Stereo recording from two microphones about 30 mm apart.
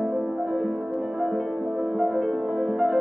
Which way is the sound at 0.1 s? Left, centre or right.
Centre.